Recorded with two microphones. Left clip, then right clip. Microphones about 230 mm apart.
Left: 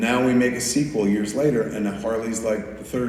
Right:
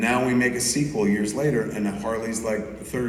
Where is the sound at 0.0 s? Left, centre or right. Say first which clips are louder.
Left 2 dB; right.